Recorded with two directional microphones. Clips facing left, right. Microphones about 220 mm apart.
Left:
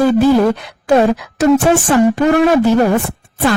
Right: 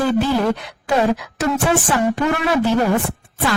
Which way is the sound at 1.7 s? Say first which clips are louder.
Left 6 dB; 45° left (ahead or behind).